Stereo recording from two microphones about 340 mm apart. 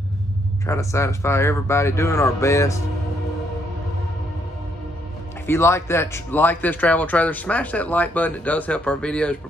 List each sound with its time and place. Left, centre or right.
0.7 s speech: centre
5.5 s speech: centre